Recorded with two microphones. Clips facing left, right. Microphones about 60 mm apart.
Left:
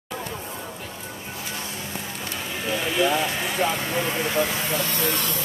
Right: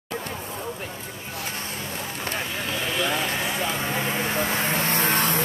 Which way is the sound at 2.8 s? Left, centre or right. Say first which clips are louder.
Left 4 dB; centre.